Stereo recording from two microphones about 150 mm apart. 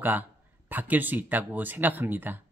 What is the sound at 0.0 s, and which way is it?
Speech, 10° right (ahead or behind).